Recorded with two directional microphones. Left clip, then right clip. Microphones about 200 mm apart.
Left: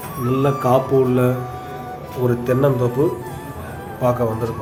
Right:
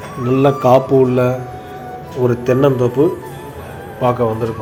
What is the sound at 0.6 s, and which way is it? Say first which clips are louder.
Speech: right 4 dB; 20° right (ahead or behind).